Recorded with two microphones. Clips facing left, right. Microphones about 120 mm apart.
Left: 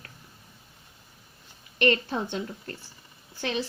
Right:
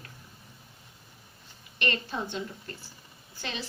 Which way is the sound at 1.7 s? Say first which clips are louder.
Left 7 dB; 55° left (ahead or behind).